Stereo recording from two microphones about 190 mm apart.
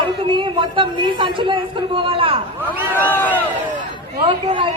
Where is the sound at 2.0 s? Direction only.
30° right (ahead or behind).